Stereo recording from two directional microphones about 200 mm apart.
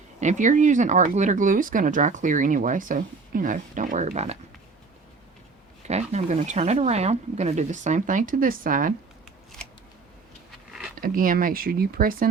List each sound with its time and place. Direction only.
0.2 s speech: 35° right (ahead or behind)
5.9 s speech: 35° right (ahead or behind)
10.7 s a sound: 5° right (ahead or behind)
10.9 s speech: 45° right (ahead or behind)